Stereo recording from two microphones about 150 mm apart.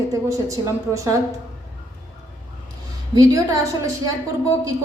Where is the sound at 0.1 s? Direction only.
20° right (ahead or behind).